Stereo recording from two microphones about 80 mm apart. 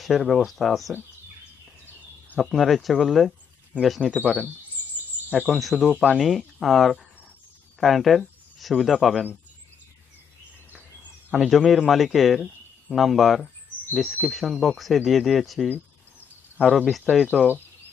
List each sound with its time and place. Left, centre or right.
0.0 s speech: centre
2.2 s a sound: centre
2.5 s speech: centre
5.5 s speech: centre
10.7 s a sound: centre
11.3 s speech: centre